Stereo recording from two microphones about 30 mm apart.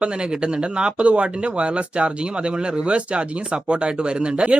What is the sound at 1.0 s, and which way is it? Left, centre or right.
Speech, right.